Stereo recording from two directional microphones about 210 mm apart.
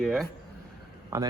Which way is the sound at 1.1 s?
15° right (ahead or behind).